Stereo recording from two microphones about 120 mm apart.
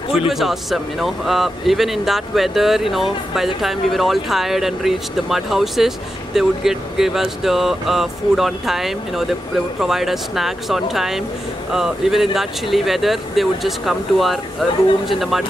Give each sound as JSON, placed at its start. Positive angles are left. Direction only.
{"t": 0.3, "sound": "speech", "side_deg": 0}